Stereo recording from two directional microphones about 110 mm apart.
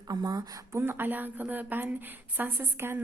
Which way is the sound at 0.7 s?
20° right (ahead or behind).